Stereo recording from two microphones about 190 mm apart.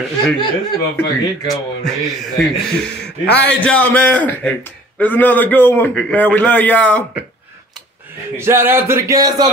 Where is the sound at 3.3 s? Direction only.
65° left (ahead or behind).